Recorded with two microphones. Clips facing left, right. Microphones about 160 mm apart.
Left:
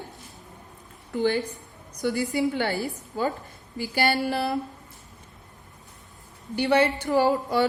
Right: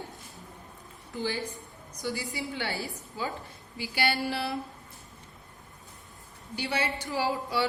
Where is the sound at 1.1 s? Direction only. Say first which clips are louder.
Left 8 dB; 60° left (ahead or behind).